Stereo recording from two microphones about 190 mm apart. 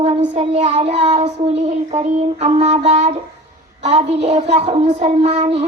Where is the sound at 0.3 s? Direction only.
35° right (ahead or behind).